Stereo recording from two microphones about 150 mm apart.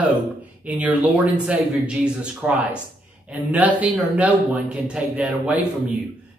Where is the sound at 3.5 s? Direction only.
10° right (ahead or behind).